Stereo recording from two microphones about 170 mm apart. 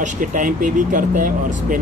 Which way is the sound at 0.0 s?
50° right (ahead or behind).